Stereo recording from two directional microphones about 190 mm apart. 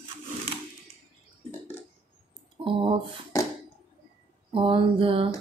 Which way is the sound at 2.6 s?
30° right (ahead or behind).